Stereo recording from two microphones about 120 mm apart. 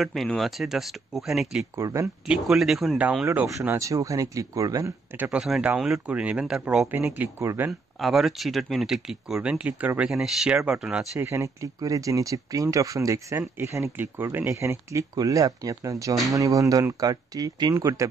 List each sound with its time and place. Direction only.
0.0 s speech: centre (ahead or behind)
1.8 s speech: 25° right (ahead or behind)
2.2 s speech: 5° right (ahead or behind)
3.0 s speech: 10° right (ahead or behind)
3.4 s speech: 25° right (ahead or behind)
5.2 s speech: 5° right (ahead or behind)
8.0 s speech: centre (ahead or behind)
11.1 s speech: 25° right (ahead or behind)